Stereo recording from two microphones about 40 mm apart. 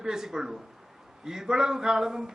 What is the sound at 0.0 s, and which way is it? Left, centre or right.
A man's voice, centre.